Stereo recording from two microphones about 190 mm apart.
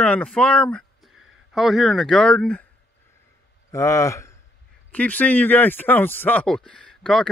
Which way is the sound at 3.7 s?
15° left (ahead or behind).